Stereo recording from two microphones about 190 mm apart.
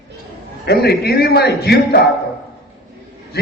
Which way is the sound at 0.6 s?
60° left (ahead or behind).